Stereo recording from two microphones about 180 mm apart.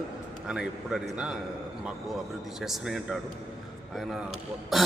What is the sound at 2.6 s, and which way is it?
A man's voice, centre (ahead or behind).